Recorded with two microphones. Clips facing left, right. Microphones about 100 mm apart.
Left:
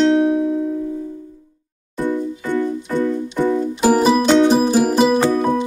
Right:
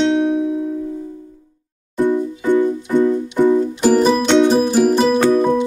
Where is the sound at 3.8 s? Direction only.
10° left (ahead or behind).